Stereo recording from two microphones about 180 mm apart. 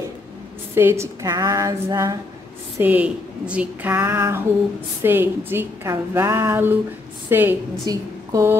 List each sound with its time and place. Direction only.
0.7 s speech: 15° right (ahead or behind)
2.8 s a woman's voice: 10° right (ahead or behind)